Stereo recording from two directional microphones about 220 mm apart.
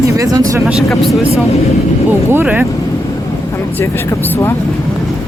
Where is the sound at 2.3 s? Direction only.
10° right (ahead or behind).